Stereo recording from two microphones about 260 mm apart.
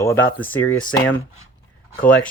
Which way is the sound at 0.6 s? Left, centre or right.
Left.